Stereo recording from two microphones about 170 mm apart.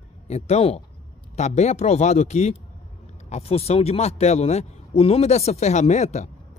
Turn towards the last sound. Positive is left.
turn(degrees=45)  # may be behind; listen again after turning